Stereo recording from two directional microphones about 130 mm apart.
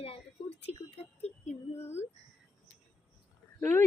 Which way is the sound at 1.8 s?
20° left (ahead or behind).